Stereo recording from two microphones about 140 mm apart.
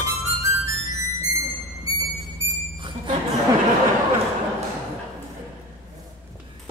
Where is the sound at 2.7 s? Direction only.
35° right (ahead or behind).